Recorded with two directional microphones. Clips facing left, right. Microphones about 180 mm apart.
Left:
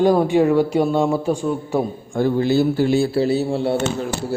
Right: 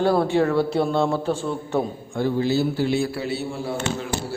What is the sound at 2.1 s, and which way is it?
Speech, 50° left (ahead or behind).